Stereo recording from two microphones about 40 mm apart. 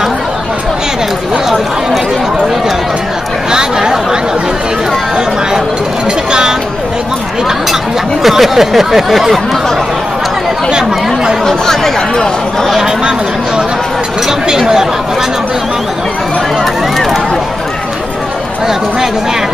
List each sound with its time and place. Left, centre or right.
3.5 s chatter: centre
8.2 s a sound: centre
10.7 s speech: centre
11.4 s speech: centre
14.5 s speech: centre